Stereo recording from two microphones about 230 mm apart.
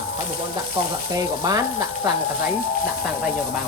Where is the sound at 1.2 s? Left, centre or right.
Centre.